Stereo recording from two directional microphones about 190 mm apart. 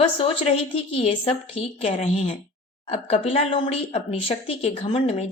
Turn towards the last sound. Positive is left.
turn(degrees=30)  # may be behind; listen again after turning